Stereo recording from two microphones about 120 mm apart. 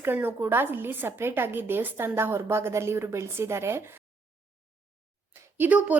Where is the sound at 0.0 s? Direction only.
15° right (ahead or behind).